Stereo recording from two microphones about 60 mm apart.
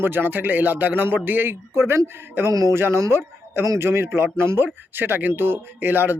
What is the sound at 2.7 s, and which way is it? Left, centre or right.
Speech, right.